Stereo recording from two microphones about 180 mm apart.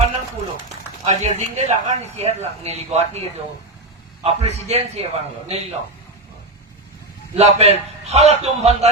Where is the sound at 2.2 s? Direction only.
35° right (ahead or behind).